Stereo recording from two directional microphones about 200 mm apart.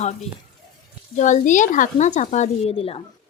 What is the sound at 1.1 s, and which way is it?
Speech, 40° left (ahead or behind).